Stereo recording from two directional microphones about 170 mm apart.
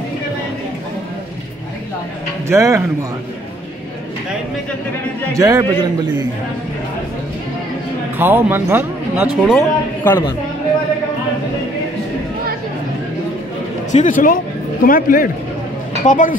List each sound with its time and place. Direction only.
2.4 s speech: 15° right (ahead or behind)
5.3 s a man's voice: 20° right (ahead or behind)
8.2 s speech: 10° right (ahead or behind)
9.6 s speech: 10° left (ahead or behind)
13.9 s speech: 50° left (ahead or behind)